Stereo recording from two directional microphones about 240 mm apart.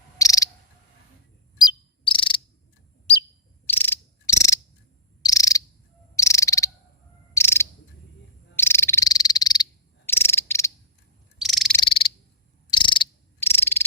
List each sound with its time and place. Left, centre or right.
0.2 s cricket: centre
2.0 s cricket: left
3.7 s cricket: centre
8.5 s frog: centre
10.1 s cricket: centre
11.4 s frog: centre
11.8 s frog: left
12.7 s cricket: centre